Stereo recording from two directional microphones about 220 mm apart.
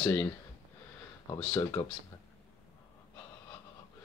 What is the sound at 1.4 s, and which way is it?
Speech, 10° left (ahead or behind).